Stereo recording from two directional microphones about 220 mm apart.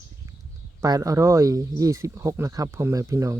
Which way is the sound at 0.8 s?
15° right (ahead or behind).